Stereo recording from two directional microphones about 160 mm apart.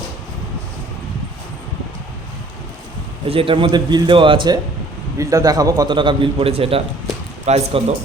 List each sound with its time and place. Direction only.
3.2 s a man's voice: 35° right (ahead or behind)